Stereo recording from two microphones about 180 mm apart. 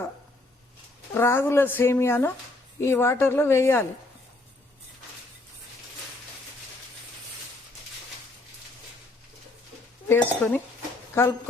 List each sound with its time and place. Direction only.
1.1 s speech: 15° left (ahead or behind)
10.1 s speech: 10° left (ahead or behind)